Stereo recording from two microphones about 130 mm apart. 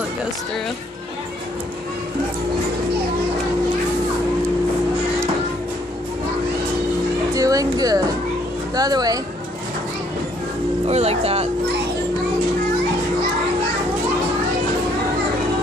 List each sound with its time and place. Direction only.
7.3 s music: 25° right (ahead or behind)
8.7 s speech: 30° right (ahead or behind)
10.9 s speech: 55° right (ahead or behind)